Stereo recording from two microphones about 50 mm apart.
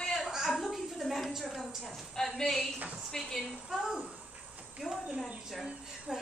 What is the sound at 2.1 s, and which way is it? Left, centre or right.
Speech, centre.